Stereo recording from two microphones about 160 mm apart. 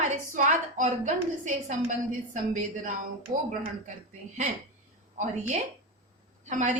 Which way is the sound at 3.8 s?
50° right (ahead or behind).